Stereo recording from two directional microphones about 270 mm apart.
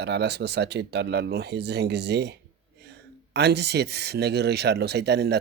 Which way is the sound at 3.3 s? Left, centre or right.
Right.